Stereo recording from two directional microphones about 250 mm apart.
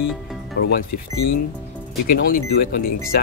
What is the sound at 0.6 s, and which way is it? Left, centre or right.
Speech, left.